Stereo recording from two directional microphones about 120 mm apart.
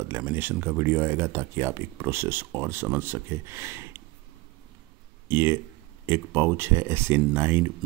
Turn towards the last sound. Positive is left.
turn(degrees=-20)  # may be behind; listen again after turning